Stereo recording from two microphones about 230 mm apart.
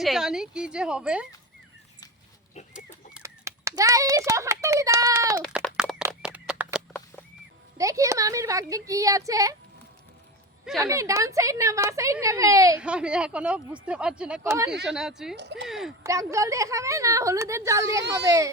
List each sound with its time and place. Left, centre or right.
0.0 s a woman's voice: centre
2.7 s speech: centre
5.4 s a sound: centre
7.8 s speech: centre
10.8 s a woman's voice: centre
15.4 s speech: right
15.6 s a woman's voice: centre
16.0 s speech: centre